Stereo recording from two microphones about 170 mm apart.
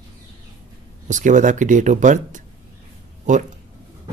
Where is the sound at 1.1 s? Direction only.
45° right (ahead or behind).